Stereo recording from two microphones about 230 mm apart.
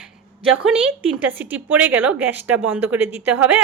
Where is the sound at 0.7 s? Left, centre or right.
Centre.